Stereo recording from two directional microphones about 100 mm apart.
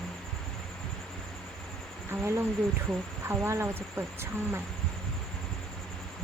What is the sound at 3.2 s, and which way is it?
Speech, 25° right (ahead or behind).